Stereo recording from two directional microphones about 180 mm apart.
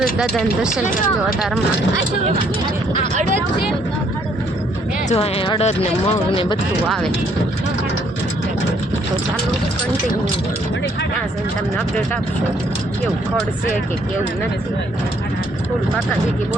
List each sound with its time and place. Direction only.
0.0 s speech: centre (ahead or behind)
5.0 s speech: 35° left (ahead or behind)